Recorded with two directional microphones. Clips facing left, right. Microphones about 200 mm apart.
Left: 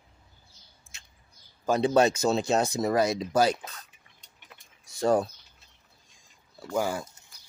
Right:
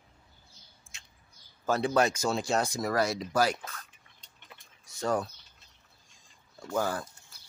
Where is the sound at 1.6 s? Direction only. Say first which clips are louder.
Left 4 dB; 20° left (ahead or behind).